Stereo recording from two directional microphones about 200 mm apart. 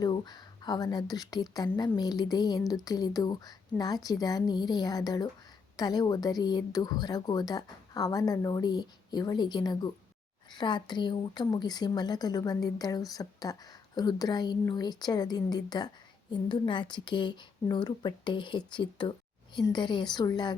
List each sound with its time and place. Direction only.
0.0 s a woman's voice: 20° left (ahead or behind)